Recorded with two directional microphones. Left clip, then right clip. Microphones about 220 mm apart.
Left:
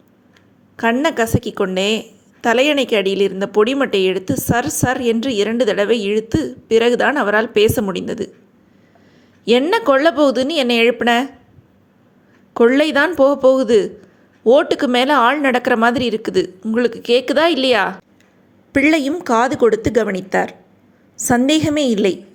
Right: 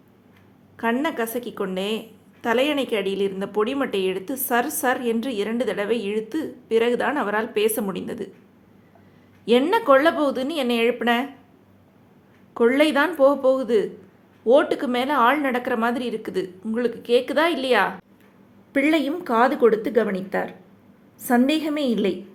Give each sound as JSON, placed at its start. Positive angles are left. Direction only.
{"t": 0.8, "sound": "a woman's voice", "side_deg": 25}
{"t": 9.4, "sound": "a woman's voice", "side_deg": 25}
{"t": 12.5, "sound": "a woman's voice", "side_deg": 25}